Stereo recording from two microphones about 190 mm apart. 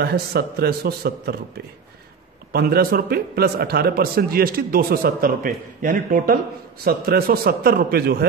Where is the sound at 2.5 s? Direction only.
55° right (ahead or behind).